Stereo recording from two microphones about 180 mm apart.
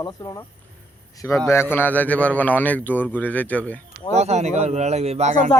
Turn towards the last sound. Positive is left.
turn(degrees=-40)  # may be behind; listen again after turning